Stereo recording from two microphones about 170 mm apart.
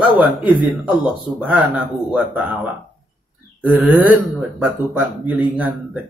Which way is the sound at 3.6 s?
10° right (ahead or behind).